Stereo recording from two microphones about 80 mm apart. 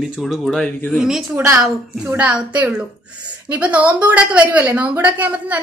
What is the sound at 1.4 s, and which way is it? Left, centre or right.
Speech, right.